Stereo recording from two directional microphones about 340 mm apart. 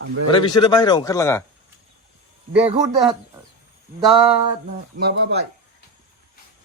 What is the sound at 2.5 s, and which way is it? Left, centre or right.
Speech, centre.